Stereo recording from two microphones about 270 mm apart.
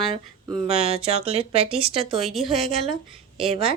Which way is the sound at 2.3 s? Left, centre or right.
Centre.